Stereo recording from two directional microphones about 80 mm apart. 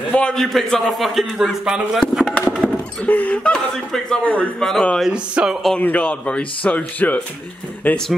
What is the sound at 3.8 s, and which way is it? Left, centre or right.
A man's voice, centre.